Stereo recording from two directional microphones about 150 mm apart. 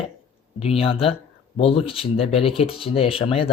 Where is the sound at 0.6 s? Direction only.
40° left (ahead or behind).